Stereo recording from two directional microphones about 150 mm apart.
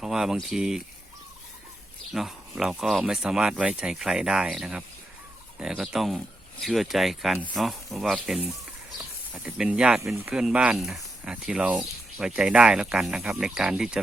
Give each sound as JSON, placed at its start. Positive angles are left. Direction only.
{"t": 0.0, "sound": "speech", "side_deg": -5}
{"t": 2.1, "sound": "speech", "side_deg": -5}